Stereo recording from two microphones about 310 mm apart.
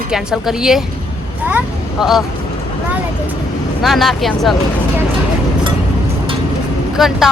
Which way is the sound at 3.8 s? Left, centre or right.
Centre.